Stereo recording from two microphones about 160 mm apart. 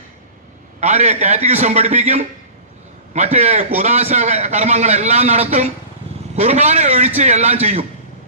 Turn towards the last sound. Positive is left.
turn(degrees=-40)  # may be behind; listen again after turning